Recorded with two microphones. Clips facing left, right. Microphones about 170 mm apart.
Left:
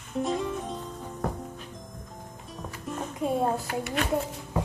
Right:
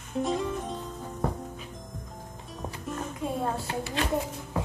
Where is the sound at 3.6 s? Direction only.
30° right (ahead or behind).